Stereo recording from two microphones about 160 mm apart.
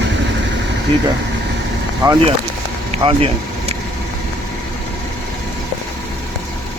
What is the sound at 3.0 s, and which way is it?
Speech, 35° right (ahead or behind).